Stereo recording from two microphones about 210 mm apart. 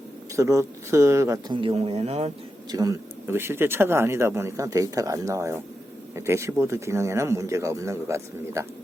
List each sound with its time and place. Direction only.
0.3 s speech: 15° right (ahead or behind); by 2.3 s 30° right (ahead or behind)
2.6 s speech: 15° right (ahead or behind)